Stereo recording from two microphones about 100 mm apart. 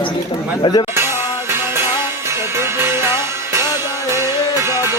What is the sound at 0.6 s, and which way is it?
Speech, 45° left (ahead or behind).